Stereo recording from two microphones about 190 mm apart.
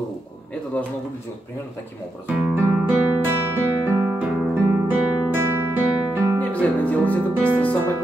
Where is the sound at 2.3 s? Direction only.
5° right (ahead or behind).